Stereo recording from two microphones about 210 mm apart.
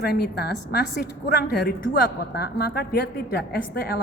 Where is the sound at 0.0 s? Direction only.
50° left (ahead or behind).